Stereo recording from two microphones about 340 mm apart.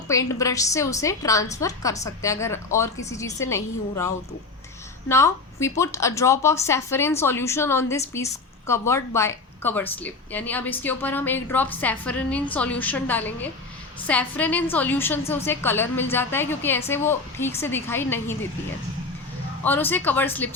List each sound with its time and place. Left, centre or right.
0.1 s a woman's voice: centre
19.6 s a woman's voice: centre